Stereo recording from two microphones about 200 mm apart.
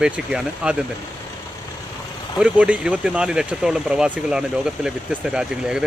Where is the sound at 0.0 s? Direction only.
5° right (ahead or behind).